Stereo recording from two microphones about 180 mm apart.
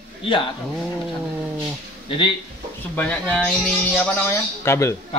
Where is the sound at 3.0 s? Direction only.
5° left (ahead or behind).